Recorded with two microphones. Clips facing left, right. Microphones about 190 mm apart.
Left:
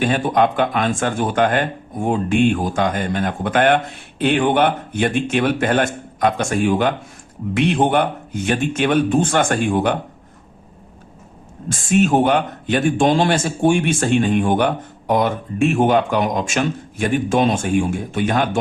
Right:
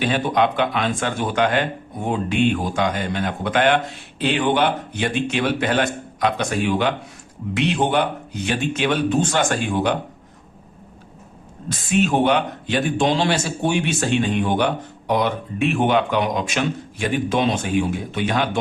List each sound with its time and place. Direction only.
0.0 s a man's voice: 50° left (ahead or behind)
11.7 s a man's voice: 50° left (ahead or behind)